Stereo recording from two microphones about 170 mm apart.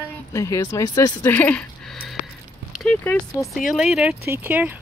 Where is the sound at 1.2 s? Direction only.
10° left (ahead or behind).